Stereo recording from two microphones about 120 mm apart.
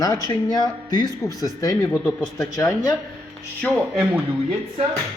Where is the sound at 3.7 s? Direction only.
5° right (ahead or behind).